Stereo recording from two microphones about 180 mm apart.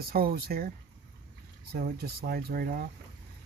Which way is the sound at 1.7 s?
60° right (ahead or behind).